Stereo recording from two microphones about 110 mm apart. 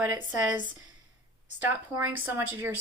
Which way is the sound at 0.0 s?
10° right (ahead or behind).